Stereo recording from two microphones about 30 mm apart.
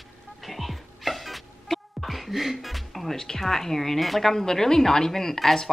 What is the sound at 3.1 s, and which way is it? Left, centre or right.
A woman's voice, centre.